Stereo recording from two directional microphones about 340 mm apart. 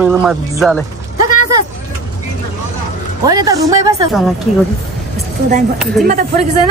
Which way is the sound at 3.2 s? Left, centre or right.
Centre.